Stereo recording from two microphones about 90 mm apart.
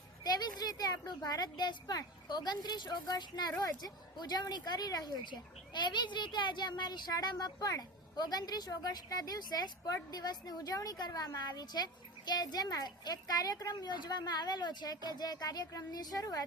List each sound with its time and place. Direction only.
0.3 s speech: 45° left (ahead or behind)